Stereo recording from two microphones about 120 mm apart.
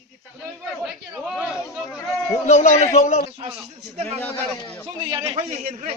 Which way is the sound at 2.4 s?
80° left.